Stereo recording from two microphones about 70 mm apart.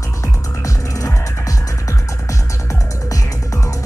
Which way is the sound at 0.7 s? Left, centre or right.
Left.